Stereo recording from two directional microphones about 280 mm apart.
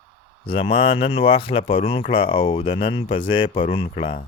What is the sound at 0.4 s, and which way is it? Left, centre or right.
Speech, centre.